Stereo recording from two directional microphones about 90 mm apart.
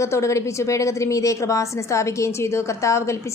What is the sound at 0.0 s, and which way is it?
A woman's voice, 35° left (ahead or behind).